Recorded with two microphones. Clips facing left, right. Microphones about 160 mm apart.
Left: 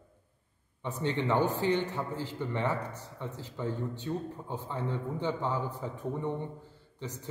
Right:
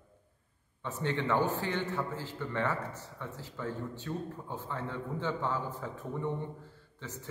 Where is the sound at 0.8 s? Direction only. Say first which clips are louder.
Left 2 dB; 15° left (ahead or behind).